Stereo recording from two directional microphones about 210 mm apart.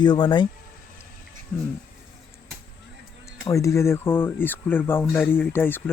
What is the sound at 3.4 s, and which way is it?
Speech, 15° left (ahead or behind).